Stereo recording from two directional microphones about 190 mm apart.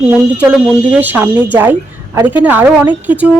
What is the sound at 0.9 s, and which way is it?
A woman's voice, 10° right (ahead or behind).